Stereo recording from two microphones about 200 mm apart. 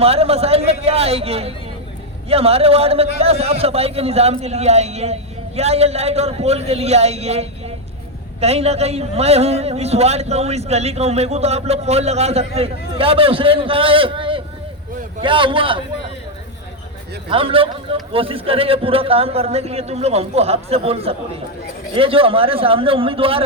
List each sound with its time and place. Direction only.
0.0 s a man's voice: 30° right (ahead or behind)
17.2 s a man's voice: 25° right (ahead or behind)